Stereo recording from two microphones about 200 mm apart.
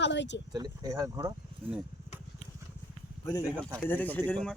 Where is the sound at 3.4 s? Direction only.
15° right (ahead or behind).